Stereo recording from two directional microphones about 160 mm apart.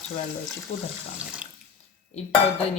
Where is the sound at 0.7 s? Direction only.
40° left (ahead or behind).